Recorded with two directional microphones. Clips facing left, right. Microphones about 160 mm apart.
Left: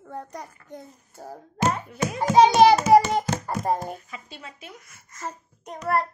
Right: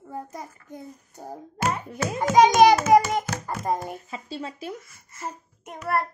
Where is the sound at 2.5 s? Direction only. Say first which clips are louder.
Even; 30° left (ahead or behind).